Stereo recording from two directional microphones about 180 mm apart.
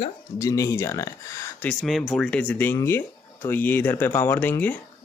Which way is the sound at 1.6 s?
Centre (ahead or behind).